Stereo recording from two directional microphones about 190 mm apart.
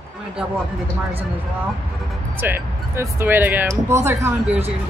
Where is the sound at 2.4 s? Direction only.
10° right (ahead or behind).